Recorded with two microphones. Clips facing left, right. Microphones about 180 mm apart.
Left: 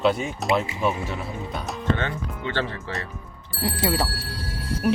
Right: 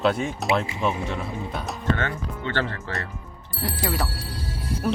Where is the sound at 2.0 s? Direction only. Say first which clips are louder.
Even; 15° left (ahead or behind).